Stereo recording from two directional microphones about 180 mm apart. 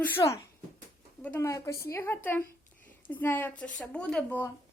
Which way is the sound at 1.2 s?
15° left (ahead or behind).